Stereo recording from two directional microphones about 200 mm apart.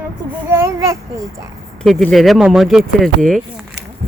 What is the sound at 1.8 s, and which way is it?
Speech, centre (ahead or behind).